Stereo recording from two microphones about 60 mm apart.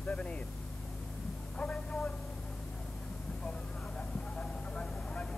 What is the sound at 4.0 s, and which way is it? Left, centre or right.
Vehicle, centre.